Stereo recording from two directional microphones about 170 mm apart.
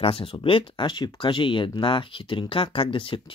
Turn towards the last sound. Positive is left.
turn(degrees=30)  # may be behind; listen again after turning